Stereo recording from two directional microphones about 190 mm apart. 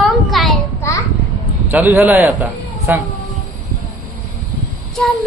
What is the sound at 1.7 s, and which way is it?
A man's voice, 10° right (ahead or behind).